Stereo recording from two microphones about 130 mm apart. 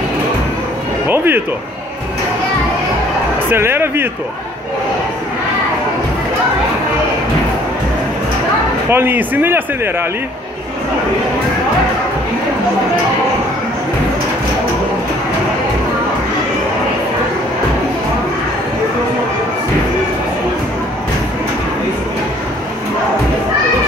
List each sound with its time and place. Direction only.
1.0 s music: 15° right (ahead or behind)
3.4 s speech: 15° right (ahead or behind)
8.9 s speech: 15° right (ahead or behind)